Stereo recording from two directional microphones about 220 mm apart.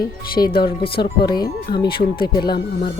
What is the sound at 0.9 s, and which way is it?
Speech, 45° left (ahead or behind).